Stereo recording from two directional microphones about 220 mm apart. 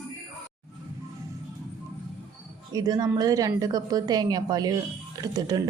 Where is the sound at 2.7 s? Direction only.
15° right (ahead or behind).